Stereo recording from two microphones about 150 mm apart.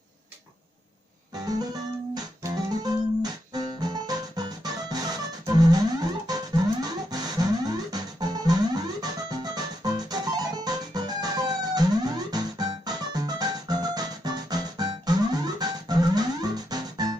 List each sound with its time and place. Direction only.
2.1 s music: 25° right (ahead or behind)